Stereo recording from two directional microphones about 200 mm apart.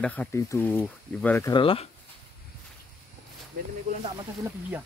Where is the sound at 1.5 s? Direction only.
25° left (ahead or behind).